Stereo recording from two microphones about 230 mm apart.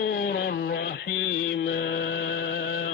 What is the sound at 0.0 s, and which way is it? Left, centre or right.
Mantra, left.